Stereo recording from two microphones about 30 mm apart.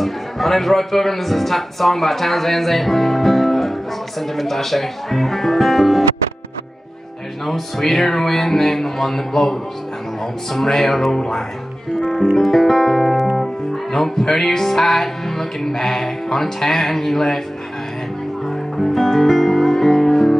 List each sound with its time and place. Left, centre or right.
0.0 s speech: centre
7.4 s music: centre
11.1 s speech: left
12.0 s music: centre
18.8 s music: centre